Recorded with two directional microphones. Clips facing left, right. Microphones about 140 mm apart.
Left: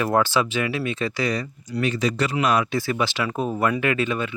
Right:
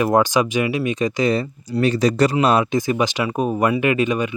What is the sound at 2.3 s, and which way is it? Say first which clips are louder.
Speech: right 4 dB; 30° right (ahead or behind).